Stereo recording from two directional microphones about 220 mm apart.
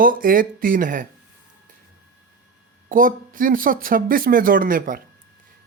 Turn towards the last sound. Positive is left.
turn(degrees=-40)  # may be behind; listen again after turning